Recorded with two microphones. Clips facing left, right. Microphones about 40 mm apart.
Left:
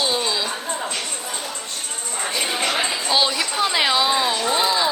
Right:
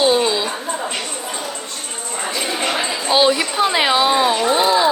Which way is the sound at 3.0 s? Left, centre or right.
Centre.